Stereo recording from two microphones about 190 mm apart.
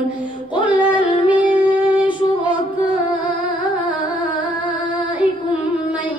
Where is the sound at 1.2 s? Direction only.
10° right (ahead or behind).